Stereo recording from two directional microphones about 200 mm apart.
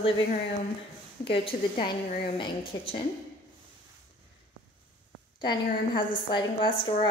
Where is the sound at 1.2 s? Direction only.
25° left (ahead or behind).